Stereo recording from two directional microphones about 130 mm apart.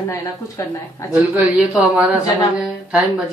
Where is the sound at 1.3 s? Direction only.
10° right (ahead or behind).